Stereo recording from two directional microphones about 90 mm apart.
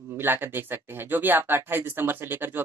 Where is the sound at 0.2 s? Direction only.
25° right (ahead or behind).